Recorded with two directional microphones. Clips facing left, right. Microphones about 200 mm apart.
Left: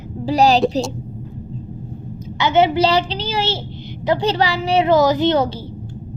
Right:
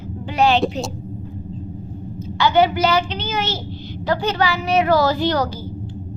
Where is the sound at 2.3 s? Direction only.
20° left (ahead or behind).